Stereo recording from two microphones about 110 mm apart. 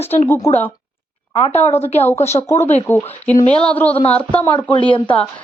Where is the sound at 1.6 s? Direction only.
75° left (ahead or behind).